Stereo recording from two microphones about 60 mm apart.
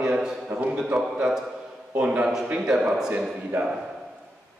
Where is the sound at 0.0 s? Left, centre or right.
Centre.